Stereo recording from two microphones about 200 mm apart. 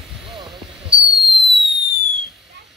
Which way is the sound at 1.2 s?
Centre (ahead or behind).